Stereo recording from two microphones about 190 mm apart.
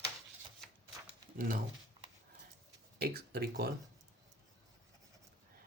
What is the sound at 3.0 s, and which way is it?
Speech, 55° right (ahead or behind).